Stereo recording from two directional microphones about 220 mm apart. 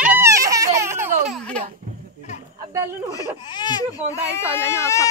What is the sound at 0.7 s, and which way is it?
Baby laughter, 10° right (ahead or behind).